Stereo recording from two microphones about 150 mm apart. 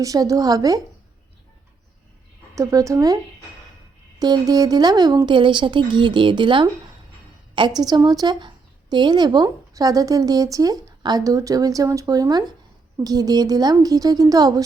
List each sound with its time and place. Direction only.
0.0 s a woman's voice: 25° right (ahead or behind)
2.6 s a woman's voice: 20° right (ahead or behind)
4.2 s a woman's voice: 25° right (ahead or behind)